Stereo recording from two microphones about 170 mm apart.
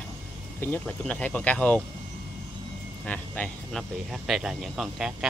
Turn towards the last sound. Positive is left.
turn(degrees=-5)  # may be behind; listen again after turning